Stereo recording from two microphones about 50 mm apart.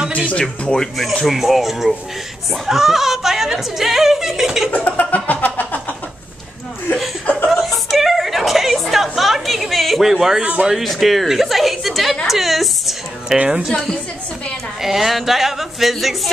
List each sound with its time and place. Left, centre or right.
0.3 s speech: left
0.7 s speech: centre
4.6 s laughter: left
7.4 s chuckle: centre
10.4 s speech: right
10.7 s speech: centre
12.3 s music: centre
13.7 s a woman's voice: centre
14.8 s speech: centre